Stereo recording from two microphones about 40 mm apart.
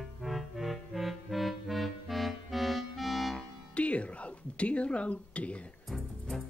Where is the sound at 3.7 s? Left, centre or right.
Left.